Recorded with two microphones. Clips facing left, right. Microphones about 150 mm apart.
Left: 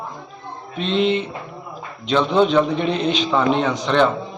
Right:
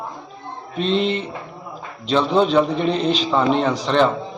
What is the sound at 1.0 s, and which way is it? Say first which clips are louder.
Speech: left 6 dB; 5° left (ahead or behind).